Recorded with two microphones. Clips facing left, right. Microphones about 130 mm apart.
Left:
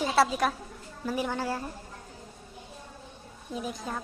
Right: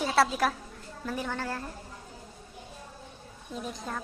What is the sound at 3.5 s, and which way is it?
Speech, 5° left (ahead or behind).